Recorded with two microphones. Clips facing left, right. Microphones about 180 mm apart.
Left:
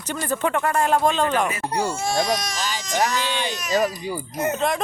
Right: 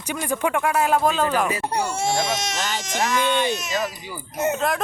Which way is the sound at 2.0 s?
25° right (ahead or behind).